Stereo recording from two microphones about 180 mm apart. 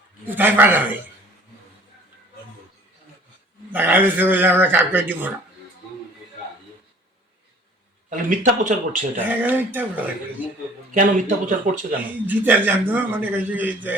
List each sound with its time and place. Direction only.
0.3 s a man's voice: 10° right (ahead or behind)
3.7 s a man's voice: 10° right (ahead or behind)
8.1 s speech: 45° right (ahead or behind)
9.4 s a man's voice: 10° right (ahead or behind)
10.9 s speech: 45° right (ahead or behind)
12.3 s a man's voice: 10° right (ahead or behind)